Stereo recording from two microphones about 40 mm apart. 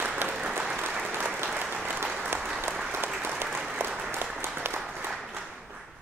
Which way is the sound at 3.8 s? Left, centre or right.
Centre.